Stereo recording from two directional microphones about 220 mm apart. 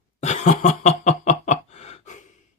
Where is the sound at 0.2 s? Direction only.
30° left (ahead or behind).